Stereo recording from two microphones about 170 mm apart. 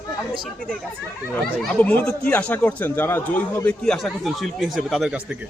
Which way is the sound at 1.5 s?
10° left (ahead or behind).